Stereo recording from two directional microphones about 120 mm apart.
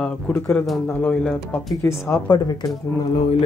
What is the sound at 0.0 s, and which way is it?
Speech, 10° left (ahead or behind).